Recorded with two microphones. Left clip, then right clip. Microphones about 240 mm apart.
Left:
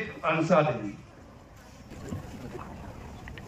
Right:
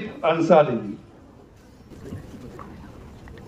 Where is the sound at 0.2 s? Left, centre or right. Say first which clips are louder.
Right 8 dB; right.